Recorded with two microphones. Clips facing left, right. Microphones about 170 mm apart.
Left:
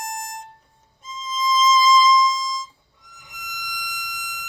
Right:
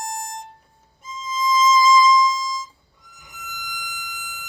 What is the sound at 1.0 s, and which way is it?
Music, 10° right (ahead or behind).